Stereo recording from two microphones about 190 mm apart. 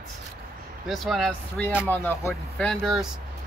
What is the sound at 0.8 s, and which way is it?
Speech, centre (ahead or behind).